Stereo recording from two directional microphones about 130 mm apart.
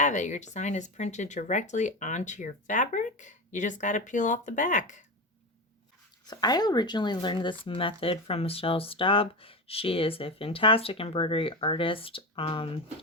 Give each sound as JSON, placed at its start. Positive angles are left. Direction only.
{"t": 0.0, "sound": "speech", "side_deg": 70}
{"t": 6.2, "sound": "speech", "side_deg": 30}